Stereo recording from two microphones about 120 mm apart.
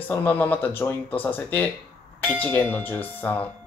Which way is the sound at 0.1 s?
15° left (ahead or behind).